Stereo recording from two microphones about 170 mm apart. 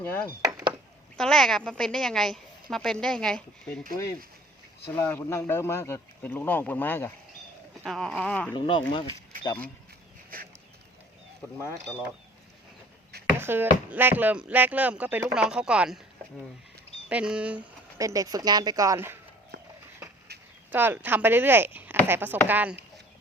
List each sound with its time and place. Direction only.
0.0 s a woman's voice: 10° left (ahead or behind)
4.9 s speech: 15° left (ahead or behind)
7.9 s a woman's voice: centre (ahead or behind)
8.5 s speech: 30° left (ahead or behind)
13.4 s speech: 10° right (ahead or behind)
17.1 s speech: 5° right (ahead or behind)
18.0 s a woman's voice: 20° right (ahead or behind)
20.7 s speech: 10° right (ahead or behind)